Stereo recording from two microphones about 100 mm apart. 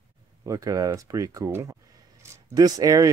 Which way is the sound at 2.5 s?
40° right (ahead or behind).